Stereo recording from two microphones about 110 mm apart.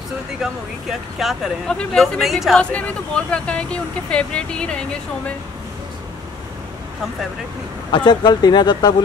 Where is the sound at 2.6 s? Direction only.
10° left (ahead or behind).